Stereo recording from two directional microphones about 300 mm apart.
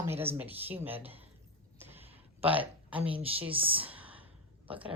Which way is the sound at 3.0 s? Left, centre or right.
Centre.